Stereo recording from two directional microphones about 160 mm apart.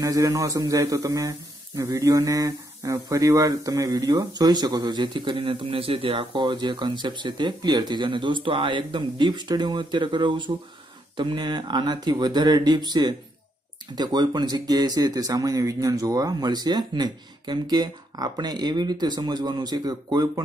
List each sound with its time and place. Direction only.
0.0 s speech: 20° right (ahead or behind)